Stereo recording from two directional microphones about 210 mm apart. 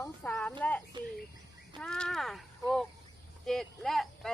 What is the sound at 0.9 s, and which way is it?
Bird, 20° right (ahead or behind).